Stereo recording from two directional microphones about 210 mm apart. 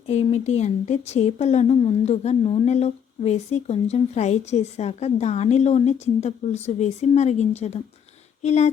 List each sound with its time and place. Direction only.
0.1 s speech: 30° left (ahead or behind)